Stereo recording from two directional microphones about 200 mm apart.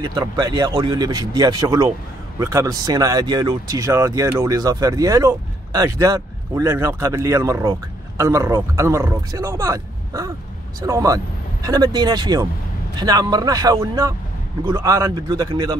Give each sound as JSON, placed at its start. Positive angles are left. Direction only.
{"t": 0.0, "sound": "speech", "side_deg": -20}